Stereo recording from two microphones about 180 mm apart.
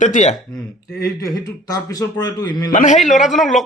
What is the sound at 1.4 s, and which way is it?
A man's voice, 20° left (ahead or behind).